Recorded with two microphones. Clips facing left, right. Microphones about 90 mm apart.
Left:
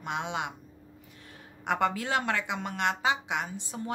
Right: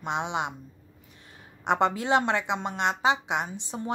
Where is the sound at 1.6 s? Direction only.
25° right (ahead or behind).